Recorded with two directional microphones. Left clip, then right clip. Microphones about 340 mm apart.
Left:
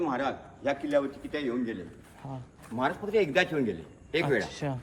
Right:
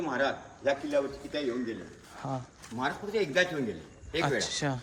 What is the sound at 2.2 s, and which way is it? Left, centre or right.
Speech, right.